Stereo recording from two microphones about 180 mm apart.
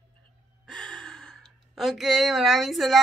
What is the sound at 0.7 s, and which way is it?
Speech, 5° left (ahead or behind).